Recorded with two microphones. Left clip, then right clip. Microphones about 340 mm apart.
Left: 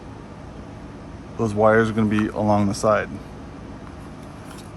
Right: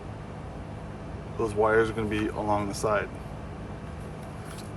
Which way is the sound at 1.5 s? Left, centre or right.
Left.